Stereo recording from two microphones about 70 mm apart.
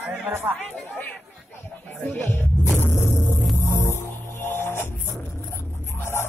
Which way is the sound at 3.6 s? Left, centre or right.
Left.